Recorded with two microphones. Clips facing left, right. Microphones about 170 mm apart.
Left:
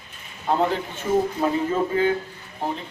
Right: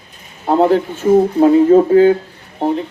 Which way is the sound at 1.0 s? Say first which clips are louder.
Right 11 dB; 55° right (ahead or behind).